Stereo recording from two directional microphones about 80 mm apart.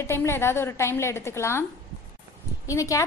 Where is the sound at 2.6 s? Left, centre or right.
Left.